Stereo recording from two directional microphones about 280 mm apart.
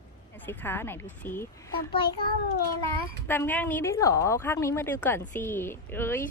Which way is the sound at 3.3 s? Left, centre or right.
Centre.